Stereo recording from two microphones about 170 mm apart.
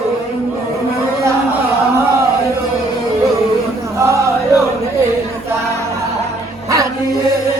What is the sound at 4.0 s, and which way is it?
Male singing, 15° right (ahead or behind).